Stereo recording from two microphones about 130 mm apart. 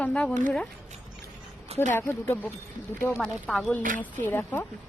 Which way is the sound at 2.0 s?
15° left (ahead or behind).